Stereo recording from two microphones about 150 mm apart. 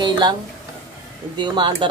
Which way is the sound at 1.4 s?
30° right (ahead or behind).